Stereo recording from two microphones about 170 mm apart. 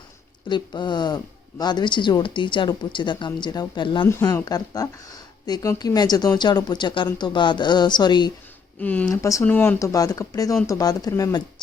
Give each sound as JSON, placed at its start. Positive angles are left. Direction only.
{"t": 0.4, "sound": "speech", "side_deg": 25}
{"t": 4.0, "sound": "speech", "side_deg": 15}
{"t": 8.8, "sound": "speech", "side_deg": 10}